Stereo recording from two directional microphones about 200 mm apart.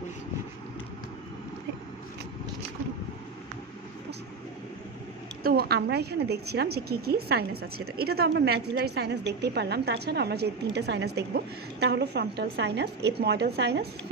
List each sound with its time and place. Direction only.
5.4 s a woman's voice: 50° right (ahead or behind)